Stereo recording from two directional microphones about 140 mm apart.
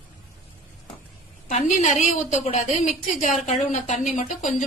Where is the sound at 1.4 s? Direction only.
60° left (ahead or behind).